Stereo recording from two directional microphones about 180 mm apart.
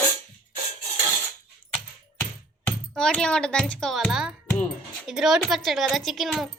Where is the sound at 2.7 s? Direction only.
5° left (ahead or behind).